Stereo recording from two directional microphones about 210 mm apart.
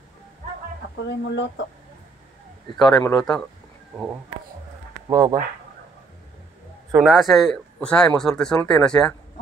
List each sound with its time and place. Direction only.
0.9 s speech: 55° left (ahead or behind)
2.8 s speech: 15° left (ahead or behind)
3.2 s a man's voice: 5° left (ahead or behind)
5.1 s speech: 15° right (ahead or behind)
7.0 s a man's voice: centre (ahead or behind)